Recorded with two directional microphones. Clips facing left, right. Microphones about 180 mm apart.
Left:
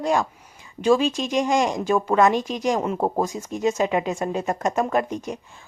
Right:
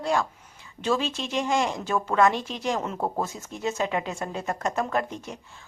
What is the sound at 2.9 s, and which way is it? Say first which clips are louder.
Speech: left 5 dB; 30° left (ahead or behind).